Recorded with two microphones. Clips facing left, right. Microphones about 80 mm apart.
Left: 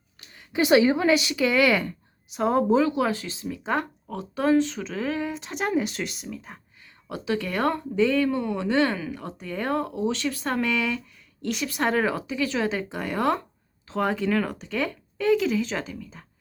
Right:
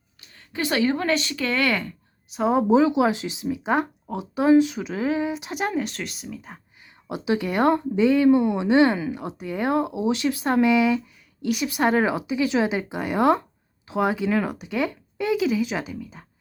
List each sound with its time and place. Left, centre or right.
0.3 s speech: centre
2.3 s speech: centre
2.6 s speech: centre
6.8 s speech: centre